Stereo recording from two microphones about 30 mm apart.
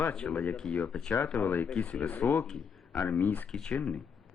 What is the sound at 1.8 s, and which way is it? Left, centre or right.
Speech, left.